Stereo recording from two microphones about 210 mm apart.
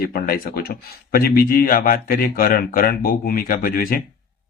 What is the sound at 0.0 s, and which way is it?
Speech, 45° left (ahead or behind).